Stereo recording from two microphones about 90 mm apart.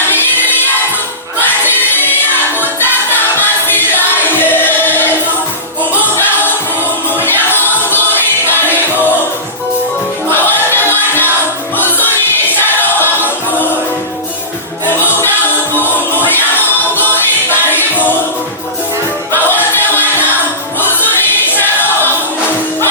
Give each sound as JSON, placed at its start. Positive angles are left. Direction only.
{"t": 0.1, "sound": "music", "side_deg": 25}
{"t": 7.1, "sound": "music", "side_deg": 25}
{"t": 10.2, "sound": "music", "side_deg": 25}
{"t": 15.1, "sound": "music", "side_deg": 25}
{"t": 19.5, "sound": "music", "side_deg": 20}
{"t": 21.5, "sound": "choir", "side_deg": 20}